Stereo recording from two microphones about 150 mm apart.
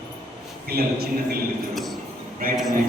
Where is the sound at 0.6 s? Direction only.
90° right.